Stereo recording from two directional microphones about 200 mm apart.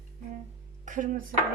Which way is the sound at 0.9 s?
40° right (ahead or behind).